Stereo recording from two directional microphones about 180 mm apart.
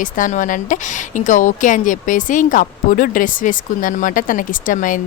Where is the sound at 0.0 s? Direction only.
45° left (ahead or behind).